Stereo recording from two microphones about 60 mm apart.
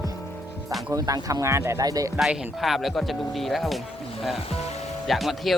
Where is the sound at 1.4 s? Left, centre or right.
Right.